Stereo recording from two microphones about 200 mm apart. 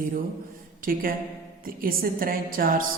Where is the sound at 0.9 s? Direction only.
45° right (ahead or behind).